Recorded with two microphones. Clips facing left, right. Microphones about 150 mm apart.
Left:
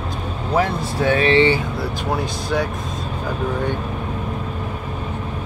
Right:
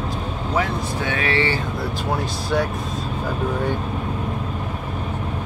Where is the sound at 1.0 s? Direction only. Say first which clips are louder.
Left 8 dB; 30° left (ahead or behind).